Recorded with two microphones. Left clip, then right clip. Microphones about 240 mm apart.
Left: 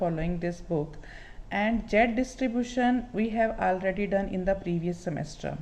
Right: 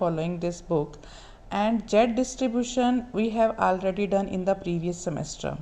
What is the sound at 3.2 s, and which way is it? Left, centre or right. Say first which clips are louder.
Speech: right 4 dB; centre.